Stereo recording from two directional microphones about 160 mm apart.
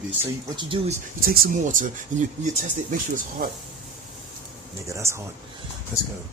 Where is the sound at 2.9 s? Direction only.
55° right (ahead or behind).